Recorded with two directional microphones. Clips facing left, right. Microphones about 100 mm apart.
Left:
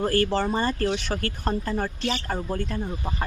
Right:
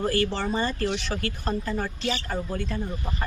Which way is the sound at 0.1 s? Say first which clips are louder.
Left 3 dB; 45° left (ahead or behind).